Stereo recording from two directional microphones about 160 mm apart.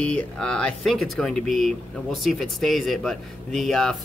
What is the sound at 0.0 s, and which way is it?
Speech, 5° left (ahead or behind).